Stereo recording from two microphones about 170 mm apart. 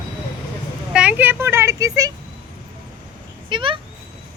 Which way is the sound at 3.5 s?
30° right (ahead or behind).